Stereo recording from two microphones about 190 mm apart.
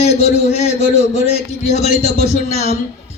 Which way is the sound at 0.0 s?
35° left (ahead or behind).